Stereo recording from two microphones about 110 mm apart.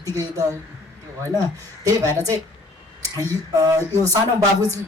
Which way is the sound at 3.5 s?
30° right (ahead or behind).